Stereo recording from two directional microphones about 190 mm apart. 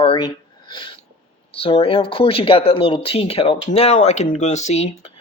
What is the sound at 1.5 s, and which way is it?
Speech, 30° left (ahead or behind).